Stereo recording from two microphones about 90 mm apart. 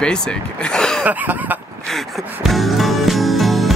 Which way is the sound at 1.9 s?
Centre (ahead or behind).